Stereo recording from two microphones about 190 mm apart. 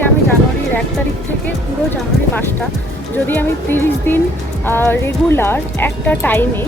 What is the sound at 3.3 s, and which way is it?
A woman's voice, 10° left (ahead or behind).